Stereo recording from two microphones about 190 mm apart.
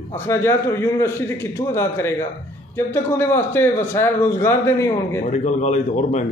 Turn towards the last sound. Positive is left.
turn(degrees=40)  # may be behind; listen again after turning